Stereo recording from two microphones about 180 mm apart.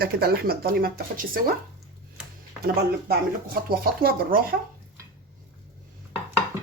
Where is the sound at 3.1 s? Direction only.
55° right (ahead or behind).